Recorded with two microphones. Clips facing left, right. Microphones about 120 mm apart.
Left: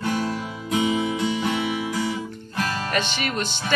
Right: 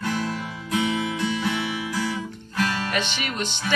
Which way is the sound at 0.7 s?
15° left (ahead or behind).